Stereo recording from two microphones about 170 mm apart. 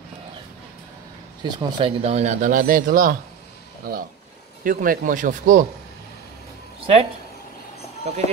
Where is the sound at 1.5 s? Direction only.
30° right (ahead or behind); by 5.6 s 50° right (ahead or behind).